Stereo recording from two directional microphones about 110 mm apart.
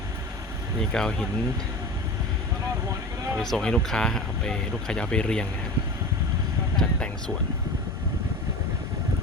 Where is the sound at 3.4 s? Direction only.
5° left (ahead or behind).